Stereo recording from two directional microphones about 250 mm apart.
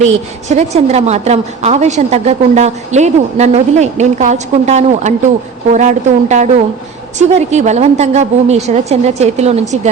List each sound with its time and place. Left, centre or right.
0.0 s a woman's voice: right